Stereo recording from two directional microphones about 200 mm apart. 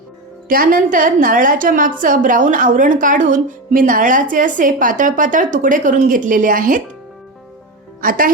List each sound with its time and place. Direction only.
0.4 s a woman's voice: 45° right (ahead or behind)
8.0 s speech: 45° right (ahead or behind)